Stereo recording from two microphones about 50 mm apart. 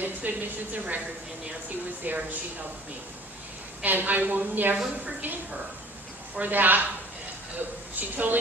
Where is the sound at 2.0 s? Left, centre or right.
Right.